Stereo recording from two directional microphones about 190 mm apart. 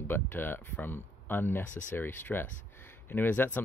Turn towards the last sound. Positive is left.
turn(degrees=10)  # may be behind; listen again after turning